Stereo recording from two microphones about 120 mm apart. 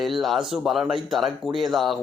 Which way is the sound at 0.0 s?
Centre (ahead or behind).